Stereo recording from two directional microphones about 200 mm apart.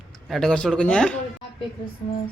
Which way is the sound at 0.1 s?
Centre (ahead or behind).